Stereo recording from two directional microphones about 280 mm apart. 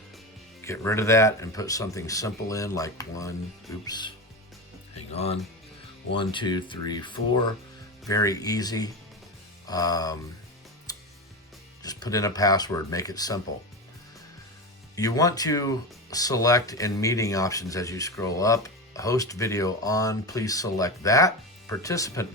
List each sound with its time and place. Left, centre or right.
0.6 s speech: centre
5.1 s speech: left
10.9 s music: centre
11.8 s speech: centre
14.9 s speech: centre